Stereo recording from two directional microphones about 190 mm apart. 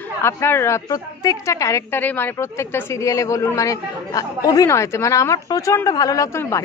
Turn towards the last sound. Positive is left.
turn(degrees=15)  # may be behind; listen again after turning